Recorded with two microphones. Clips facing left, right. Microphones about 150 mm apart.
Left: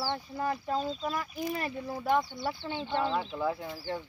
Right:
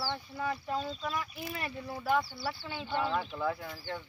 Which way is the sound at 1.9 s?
20° left (ahead or behind).